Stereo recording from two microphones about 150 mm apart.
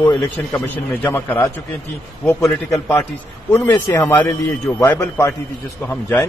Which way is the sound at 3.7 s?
20° left (ahead or behind).